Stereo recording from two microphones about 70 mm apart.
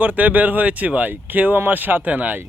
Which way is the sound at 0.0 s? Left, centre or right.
Right.